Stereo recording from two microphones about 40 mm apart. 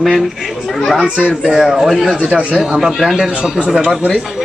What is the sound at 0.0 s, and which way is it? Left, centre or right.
Speech, centre.